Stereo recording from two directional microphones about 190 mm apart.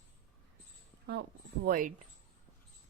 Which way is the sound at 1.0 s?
60° right (ahead or behind).